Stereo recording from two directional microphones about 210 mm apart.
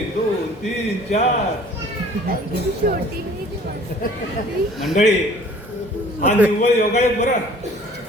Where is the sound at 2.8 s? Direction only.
45° right (ahead or behind).